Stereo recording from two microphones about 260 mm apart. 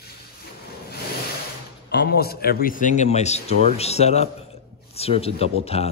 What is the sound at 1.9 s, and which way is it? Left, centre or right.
A man's voice, left.